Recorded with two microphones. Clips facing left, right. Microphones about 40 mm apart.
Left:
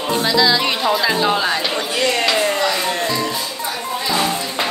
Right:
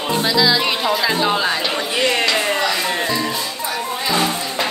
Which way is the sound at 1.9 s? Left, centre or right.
Centre.